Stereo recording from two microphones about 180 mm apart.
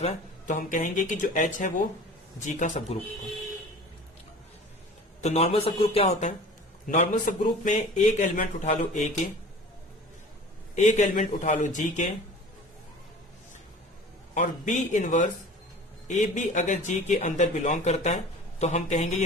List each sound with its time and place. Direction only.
0.0 s a man's voice: 45° left (ahead or behind)
5.2 s a man's voice: 35° left (ahead or behind)
10.8 s a man's voice: 40° left (ahead or behind)
14.3 s a man's voice: 45° left (ahead or behind)